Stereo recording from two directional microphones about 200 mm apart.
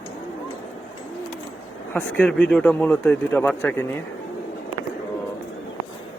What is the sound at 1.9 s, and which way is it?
A man's voice, 5° left (ahead or behind).